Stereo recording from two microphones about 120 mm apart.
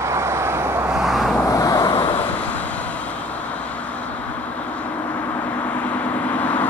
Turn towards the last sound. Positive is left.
turn(degrees=10)  # may be behind; listen again after turning